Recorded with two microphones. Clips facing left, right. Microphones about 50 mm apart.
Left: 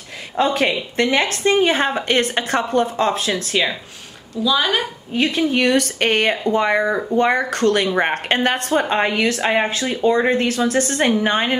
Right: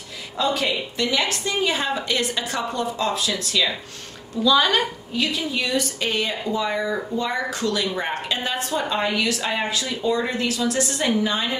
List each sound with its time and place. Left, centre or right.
0.4 s a woman's voice: left
4.4 s speech: centre
5.1 s speech: left